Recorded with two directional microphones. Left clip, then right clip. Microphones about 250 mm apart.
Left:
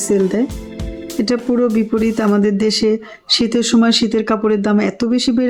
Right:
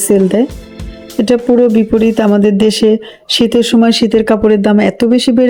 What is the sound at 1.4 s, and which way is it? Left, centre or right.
Speech, centre.